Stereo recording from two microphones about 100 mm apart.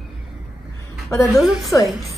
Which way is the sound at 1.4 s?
Centre (ahead or behind).